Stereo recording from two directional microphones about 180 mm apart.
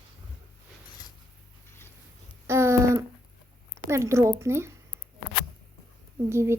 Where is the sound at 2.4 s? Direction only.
15° right (ahead or behind).